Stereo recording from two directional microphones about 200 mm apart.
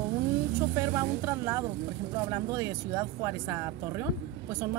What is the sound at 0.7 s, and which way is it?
Speech, 10° right (ahead or behind).